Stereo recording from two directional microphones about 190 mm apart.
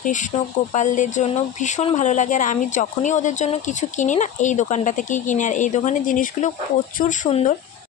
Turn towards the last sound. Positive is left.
turn(degrees=35)  # may be behind; listen again after turning